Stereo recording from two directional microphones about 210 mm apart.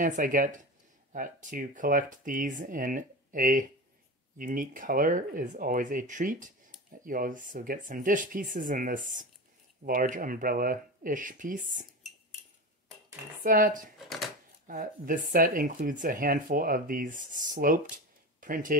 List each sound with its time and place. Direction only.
0.0 s speech: 40° right (ahead or behind)
13.4 s speech: 40° right (ahead or behind)